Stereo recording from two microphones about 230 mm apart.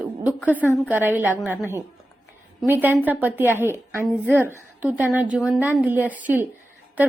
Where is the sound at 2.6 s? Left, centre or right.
Centre.